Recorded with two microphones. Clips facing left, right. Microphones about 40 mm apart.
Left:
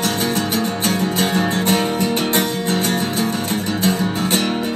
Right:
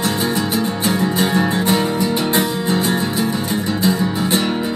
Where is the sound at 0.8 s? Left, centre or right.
Right.